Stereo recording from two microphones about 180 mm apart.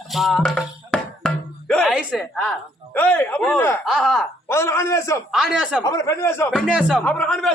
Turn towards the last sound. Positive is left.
turn(degrees=5)  # may be behind; listen again after turning